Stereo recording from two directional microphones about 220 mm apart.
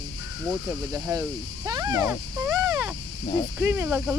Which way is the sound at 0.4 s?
10° right (ahead or behind).